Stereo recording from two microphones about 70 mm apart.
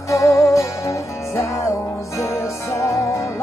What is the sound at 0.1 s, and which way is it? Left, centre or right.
Music, left.